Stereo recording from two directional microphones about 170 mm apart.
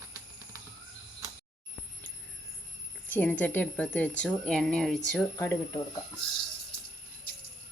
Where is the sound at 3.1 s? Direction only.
10° left (ahead or behind).